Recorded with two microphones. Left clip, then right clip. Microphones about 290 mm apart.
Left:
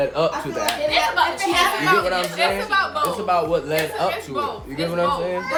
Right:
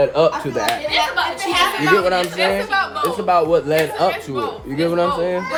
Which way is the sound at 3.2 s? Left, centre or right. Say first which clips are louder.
Right 8 dB; right.